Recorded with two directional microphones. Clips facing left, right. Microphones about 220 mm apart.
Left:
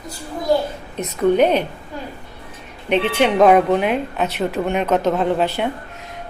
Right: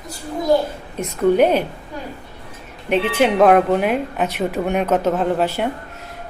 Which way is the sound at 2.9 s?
5° right (ahead or behind).